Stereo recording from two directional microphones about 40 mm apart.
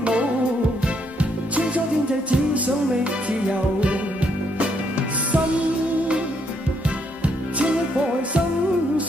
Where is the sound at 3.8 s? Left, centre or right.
Right.